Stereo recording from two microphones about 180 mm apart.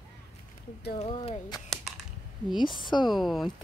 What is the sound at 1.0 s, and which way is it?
Speech, 30° left (ahead or behind).